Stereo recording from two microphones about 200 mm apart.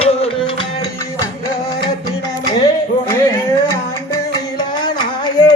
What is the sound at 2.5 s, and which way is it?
Music, 15° left (ahead or behind).